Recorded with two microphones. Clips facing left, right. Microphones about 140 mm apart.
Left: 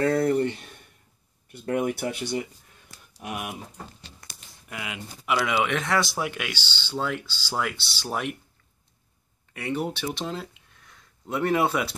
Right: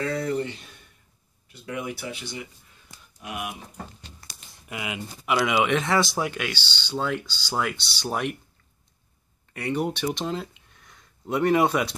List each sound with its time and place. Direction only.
0.0 s a sound: 50° left (ahead or behind)
1.5 s speech: 50° left (ahead or behind)
4.6 s speech: 10° right (ahead or behind)
5.9 s speech: centre (ahead or behind)
9.5 s speech: 5° left (ahead or behind)